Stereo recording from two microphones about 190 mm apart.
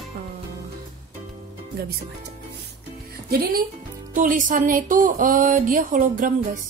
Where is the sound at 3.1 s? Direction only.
55° right (ahead or behind).